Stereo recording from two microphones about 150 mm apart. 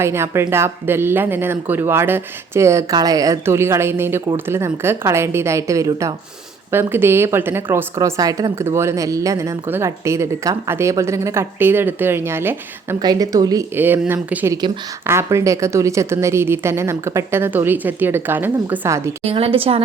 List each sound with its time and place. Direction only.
0.0 s a woman's voice: 15° right (ahead or behind)
13.7 s a woman's voice: 15° right (ahead or behind)
19.2 s speech: 40° right (ahead or behind)